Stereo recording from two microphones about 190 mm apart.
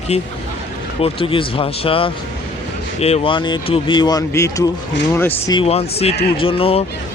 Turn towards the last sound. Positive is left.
turn(degrees=30)  # may be behind; listen again after turning